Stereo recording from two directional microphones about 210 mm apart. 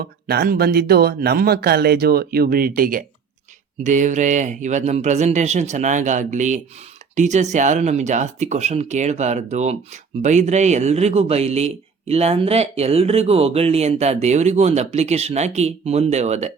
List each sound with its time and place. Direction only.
0.0 s speech: 50° right (ahead or behind); by 16.5 s 30° right (ahead or behind)